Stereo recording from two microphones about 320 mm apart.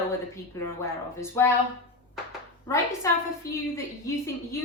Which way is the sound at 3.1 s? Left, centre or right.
Centre.